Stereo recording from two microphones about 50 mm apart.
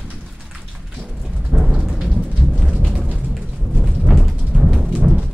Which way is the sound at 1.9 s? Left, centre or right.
Centre.